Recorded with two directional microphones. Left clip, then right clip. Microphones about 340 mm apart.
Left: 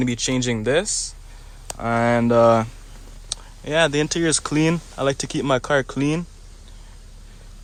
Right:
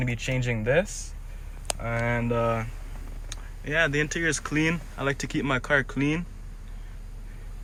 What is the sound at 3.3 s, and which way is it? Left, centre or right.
Speech, centre.